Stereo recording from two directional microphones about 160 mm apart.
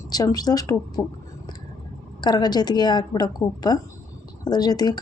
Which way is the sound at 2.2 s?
25° left (ahead or behind).